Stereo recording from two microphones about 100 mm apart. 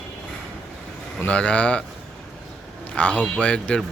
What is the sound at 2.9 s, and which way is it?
Speech, 15° left (ahead or behind).